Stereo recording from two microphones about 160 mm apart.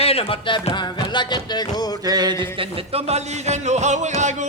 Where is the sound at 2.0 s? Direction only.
25° right (ahead or behind); by 4.1 s 45° right (ahead or behind).